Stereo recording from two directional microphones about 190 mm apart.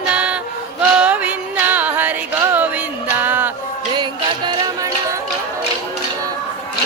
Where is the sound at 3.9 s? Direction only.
25° right (ahead or behind).